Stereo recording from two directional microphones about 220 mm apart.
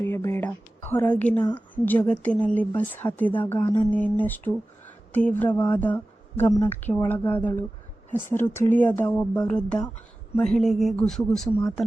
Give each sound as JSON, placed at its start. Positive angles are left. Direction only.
{"t": 0.0, "sound": "a woman's voice", "side_deg": 10}
{"t": 3.6, "sound": "music", "side_deg": 20}
{"t": 3.8, "sound": "speech", "side_deg": 5}